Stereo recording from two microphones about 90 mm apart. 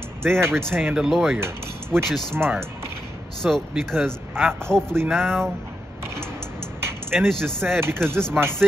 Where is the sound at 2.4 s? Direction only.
25° right (ahead or behind).